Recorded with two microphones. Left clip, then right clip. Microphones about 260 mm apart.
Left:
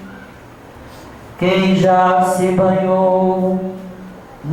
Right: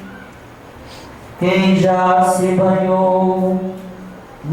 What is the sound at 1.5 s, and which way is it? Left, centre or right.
Mantra, centre.